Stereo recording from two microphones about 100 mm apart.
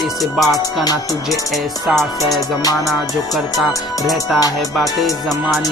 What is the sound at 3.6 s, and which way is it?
Music, centre (ahead or behind).